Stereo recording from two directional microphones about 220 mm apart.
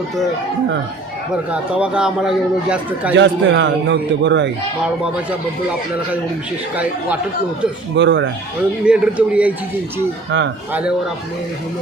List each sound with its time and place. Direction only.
1.5 s a man's voice: 5° right (ahead or behind)
3.2 s a man's voice: 55° right (ahead or behind)
7.9 s speech: 55° right (ahead or behind)
8.8 s a man's voice: 5° right (ahead or behind)
10.7 s a man's voice: 5° right (ahead or behind)